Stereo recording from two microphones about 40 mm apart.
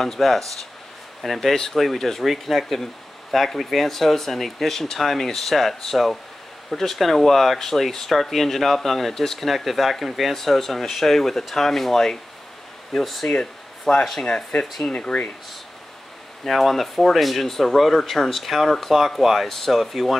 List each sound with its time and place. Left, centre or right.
0.0 s speech: centre
13.4 s a sound: centre
14.2 s speech: left
16.4 s speech: centre